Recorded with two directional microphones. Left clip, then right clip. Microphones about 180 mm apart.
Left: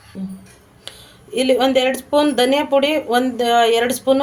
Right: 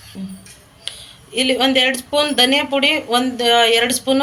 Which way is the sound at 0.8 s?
50° left (ahead or behind).